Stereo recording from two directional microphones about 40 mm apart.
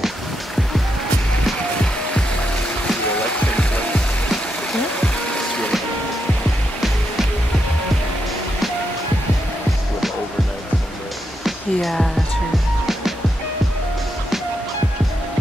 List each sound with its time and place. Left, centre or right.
3.3 s music: left
11.4 s music: centre